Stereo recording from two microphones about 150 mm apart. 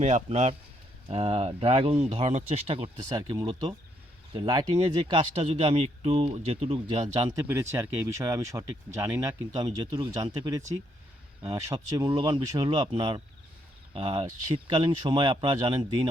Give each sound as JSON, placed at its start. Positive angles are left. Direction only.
{"t": 0.0, "sound": "speech", "side_deg": -45}
{"t": 3.2, "sound": "speech", "side_deg": -25}
{"t": 7.4, "sound": "speech", "side_deg": -15}
{"t": 9.9, "sound": "speech", "side_deg": -30}